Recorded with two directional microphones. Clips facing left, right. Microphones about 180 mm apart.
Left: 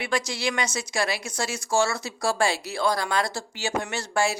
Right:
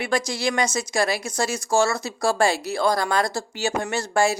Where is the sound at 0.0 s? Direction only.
45° right (ahead or behind).